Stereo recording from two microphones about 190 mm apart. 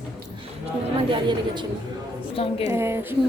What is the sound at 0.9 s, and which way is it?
Speech, 25° right (ahead or behind).